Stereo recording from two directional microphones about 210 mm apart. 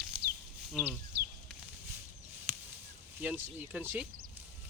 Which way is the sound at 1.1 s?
50° right (ahead or behind).